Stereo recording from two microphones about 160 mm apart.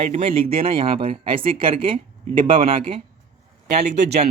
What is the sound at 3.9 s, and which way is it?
Speech, 90° right.